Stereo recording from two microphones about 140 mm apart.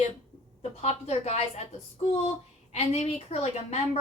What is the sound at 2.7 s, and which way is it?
A woman's voice, 50° left (ahead or behind).